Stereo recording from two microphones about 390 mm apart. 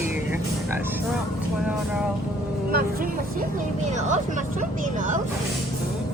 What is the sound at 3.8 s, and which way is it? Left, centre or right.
Speech, centre.